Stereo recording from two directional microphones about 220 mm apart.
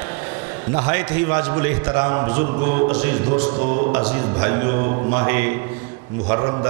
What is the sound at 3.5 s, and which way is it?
Speech, 35° right (ahead or behind).